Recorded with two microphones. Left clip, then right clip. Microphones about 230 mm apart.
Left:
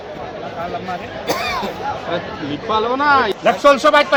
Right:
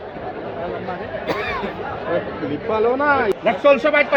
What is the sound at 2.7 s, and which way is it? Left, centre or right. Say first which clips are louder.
Speech: left 2 dB; left.